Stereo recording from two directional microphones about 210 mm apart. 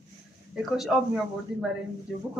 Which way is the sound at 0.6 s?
Centre (ahead or behind).